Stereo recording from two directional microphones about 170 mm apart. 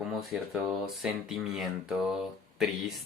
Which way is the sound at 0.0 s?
Centre (ahead or behind).